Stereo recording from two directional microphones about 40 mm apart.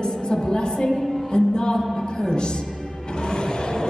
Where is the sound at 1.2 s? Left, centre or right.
Centre.